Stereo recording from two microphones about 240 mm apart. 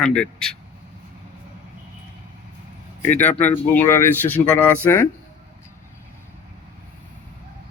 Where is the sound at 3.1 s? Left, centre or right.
Centre.